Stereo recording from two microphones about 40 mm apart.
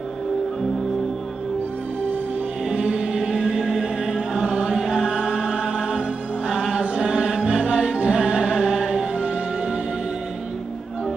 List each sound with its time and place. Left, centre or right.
2.7 s music: centre
3.2 s music: centre
4.5 s chant: right
4.7 s music: centre